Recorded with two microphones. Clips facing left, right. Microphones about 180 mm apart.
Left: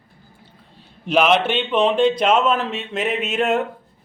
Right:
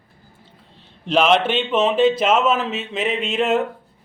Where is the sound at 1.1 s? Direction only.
5° left (ahead or behind).